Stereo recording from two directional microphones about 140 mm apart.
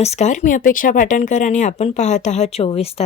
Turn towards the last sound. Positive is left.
turn(degrees=45)  # may be behind; listen again after turning